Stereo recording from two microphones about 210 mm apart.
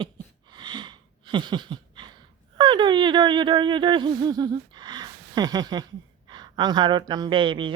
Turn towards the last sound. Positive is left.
turn(degrees=-25)  # may be behind; listen again after turning